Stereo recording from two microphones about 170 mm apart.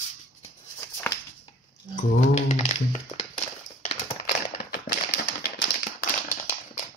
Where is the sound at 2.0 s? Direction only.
45° left (ahead or behind).